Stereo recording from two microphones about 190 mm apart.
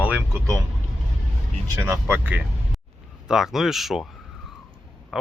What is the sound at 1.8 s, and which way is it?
Speech, 15° right (ahead or behind).